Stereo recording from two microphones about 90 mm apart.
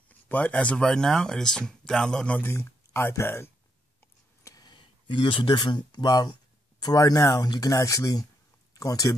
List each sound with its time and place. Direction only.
0.1 s speech: 15° left (ahead or behind)
2.5 s speech: 25° left (ahead or behind)
4.4 s a sound: 35° left (ahead or behind)
4.6 s speech: 60° left (ahead or behind); by 9.1 s 40° left (ahead or behind)